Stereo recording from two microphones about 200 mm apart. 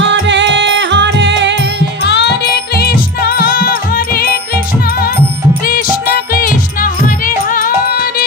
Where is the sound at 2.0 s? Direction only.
55° left (ahead or behind).